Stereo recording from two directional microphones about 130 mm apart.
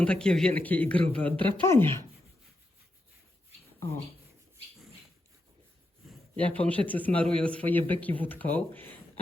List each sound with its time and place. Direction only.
0.0 s a man's voice: 5° left (ahead or behind)
6.3 s a man's voice: 10° left (ahead or behind)